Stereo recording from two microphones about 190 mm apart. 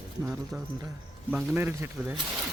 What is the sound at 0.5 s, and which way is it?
Speech, centre (ahead or behind).